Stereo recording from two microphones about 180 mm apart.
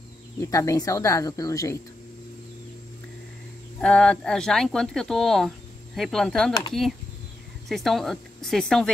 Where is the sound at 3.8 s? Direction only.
5° left (ahead or behind).